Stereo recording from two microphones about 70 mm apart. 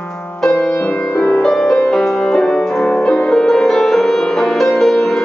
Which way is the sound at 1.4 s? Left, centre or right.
Centre.